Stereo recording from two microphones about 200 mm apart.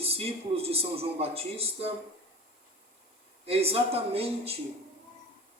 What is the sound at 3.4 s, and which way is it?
A man's voice, 30° right (ahead or behind).